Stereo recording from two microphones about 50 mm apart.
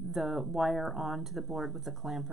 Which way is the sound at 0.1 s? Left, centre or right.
Centre.